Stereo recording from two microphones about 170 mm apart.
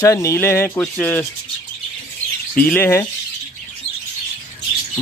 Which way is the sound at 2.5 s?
10° left (ahead or behind).